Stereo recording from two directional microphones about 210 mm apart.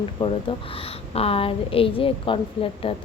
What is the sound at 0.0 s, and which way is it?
A woman's voice, 25° left (ahead or behind).